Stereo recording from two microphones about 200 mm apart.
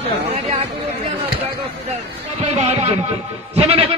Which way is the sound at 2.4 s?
35° right (ahead or behind).